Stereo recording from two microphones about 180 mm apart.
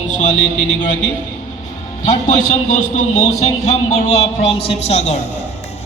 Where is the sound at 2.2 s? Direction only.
40° left (ahead or behind).